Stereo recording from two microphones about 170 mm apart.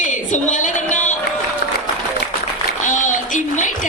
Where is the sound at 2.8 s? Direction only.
50° left (ahead or behind).